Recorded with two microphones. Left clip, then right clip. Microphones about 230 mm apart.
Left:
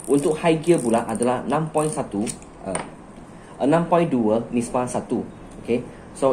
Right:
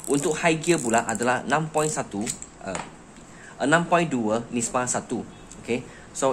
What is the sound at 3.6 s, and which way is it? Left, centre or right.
A man's voice, right.